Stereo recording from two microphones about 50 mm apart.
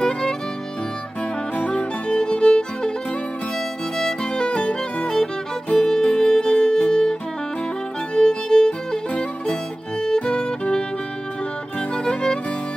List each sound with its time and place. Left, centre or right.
0.0 s music: centre
1.6 s music: left
4.0 s music: centre
5.9 s music: centre
11.9 s music: centre